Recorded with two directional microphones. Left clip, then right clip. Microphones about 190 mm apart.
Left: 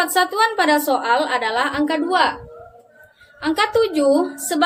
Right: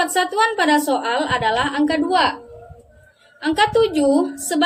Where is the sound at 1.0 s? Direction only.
15° right (ahead or behind).